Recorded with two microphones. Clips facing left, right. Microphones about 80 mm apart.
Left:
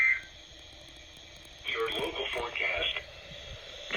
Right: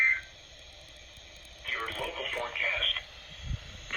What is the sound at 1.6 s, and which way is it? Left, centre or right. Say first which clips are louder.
Radio: left 3 dB; right.